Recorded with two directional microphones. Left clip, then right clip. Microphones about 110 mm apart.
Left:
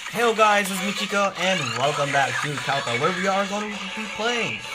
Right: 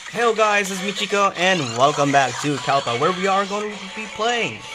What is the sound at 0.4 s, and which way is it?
Speech, 30° right (ahead or behind).